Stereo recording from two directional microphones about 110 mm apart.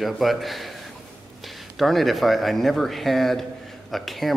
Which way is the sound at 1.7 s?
Centre (ahead or behind).